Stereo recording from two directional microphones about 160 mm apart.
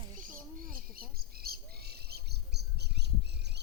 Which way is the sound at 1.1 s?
70° right (ahead or behind).